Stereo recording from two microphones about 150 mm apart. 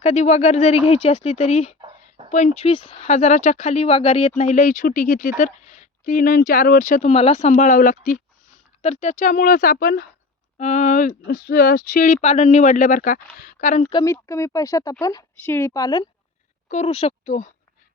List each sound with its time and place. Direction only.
0.0 s speech: 45° left (ahead or behind)
1.8 s a sound: 35° right (ahead or behind)
2.3 s speech: 50° left (ahead or behind)
3.1 s speech: 50° left (ahead or behind)
7.5 s speech: 55° left (ahead or behind)
8.8 s speech: 45° left (ahead or behind); by 10.1 s 80° left
10.6 s speech: 55° left (ahead or behind)
11.3 s speech: 75° left (ahead or behind); by 13.8 s 60° left (ahead or behind)
13.9 s speech: 20° left (ahead or behind)
16.6 s speech: 45° left (ahead or behind)